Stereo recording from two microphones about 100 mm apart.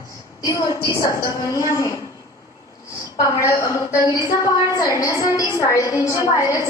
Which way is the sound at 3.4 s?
30° left (ahead or behind).